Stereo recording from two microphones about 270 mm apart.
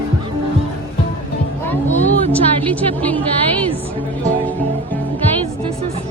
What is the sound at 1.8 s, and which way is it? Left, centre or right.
Vehicle, left.